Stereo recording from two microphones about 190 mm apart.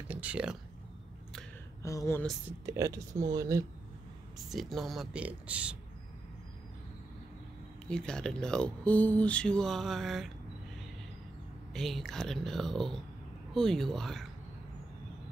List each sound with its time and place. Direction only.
0.1 s speech: 5° right (ahead or behind)
1.8 s speech: 15° left (ahead or behind)
2.6 s speech: 15° right (ahead or behind)
4.5 s speech: centre (ahead or behind)
7.9 s speech: 5° left (ahead or behind)
11.7 s speech: centre (ahead or behind)